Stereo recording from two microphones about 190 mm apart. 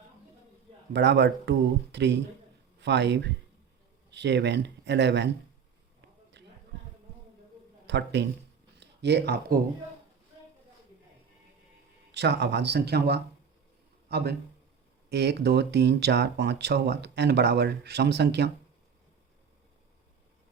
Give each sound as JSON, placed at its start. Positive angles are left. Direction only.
{"t": 0.9, "sound": "speech", "side_deg": -65}
{"t": 6.4, "sound": "a sound", "side_deg": -65}
{"t": 7.9, "sound": "speech", "side_deg": -65}
{"t": 12.1, "sound": "speech", "side_deg": -65}